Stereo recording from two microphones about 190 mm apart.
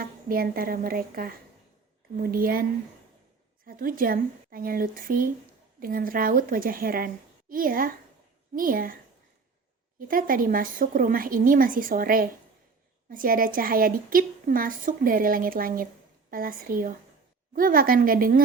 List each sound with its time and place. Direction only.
0.0 s a woman's voice: 50° right (ahead or behind)
3.7 s a woman's voice: 50° right (ahead or behind)
10.1 s a woman's voice: 50° right (ahead or behind)